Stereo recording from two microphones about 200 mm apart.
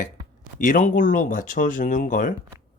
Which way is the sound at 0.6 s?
40° left (ahead or behind).